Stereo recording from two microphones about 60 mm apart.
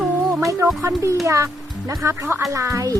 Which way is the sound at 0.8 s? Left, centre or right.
Right.